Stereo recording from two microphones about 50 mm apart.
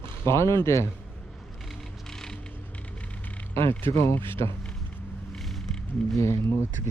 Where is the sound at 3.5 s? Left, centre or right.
Left.